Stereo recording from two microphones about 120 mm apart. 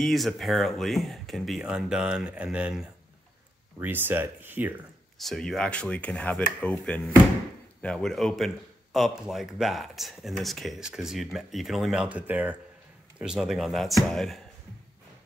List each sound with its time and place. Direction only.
0.0 s speech: centre (ahead or behind); by 4.7 s 15° right (ahead or behind)
5.2 s speech: centre (ahead or behind)